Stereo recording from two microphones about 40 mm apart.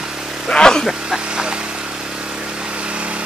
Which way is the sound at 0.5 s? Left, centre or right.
Centre.